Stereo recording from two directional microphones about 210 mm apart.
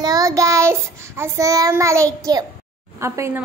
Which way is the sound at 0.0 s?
15° right (ahead or behind).